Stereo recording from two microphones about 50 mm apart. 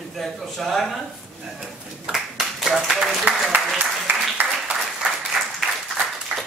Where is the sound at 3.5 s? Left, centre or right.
Right.